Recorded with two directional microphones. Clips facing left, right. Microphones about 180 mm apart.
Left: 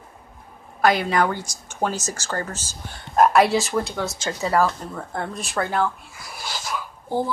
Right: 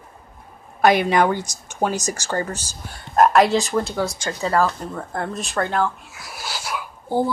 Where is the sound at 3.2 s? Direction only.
Centre (ahead or behind).